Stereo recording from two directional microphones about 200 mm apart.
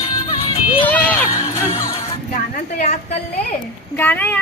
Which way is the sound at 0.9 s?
10° left (ahead or behind).